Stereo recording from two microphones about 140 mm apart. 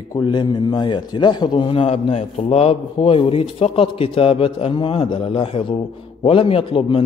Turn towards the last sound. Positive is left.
turn(degrees=40)  # may be behind; listen again after turning